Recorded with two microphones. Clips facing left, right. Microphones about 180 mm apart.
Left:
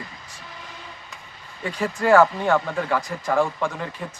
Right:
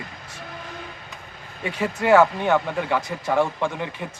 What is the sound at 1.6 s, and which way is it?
Speech, 25° right (ahead or behind).